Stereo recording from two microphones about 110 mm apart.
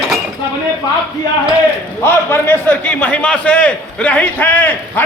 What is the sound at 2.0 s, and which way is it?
A man's voice, 20° left (ahead or behind).